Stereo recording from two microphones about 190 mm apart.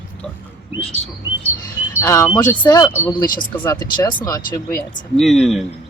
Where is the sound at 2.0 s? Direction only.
15° left (ahead or behind).